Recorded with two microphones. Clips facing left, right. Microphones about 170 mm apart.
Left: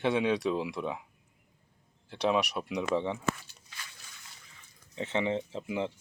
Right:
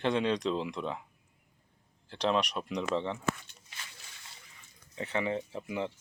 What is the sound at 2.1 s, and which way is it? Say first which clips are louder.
Speech: left 1 dB; 10° left (ahead or behind).